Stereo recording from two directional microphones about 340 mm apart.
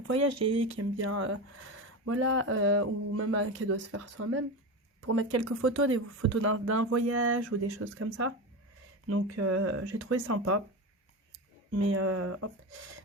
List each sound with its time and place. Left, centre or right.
0.1 s speech: right
11.7 s speech: right